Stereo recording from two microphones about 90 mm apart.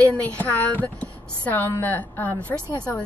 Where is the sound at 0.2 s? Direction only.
20° left (ahead or behind).